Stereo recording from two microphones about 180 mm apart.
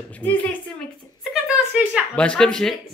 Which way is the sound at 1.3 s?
5° right (ahead or behind).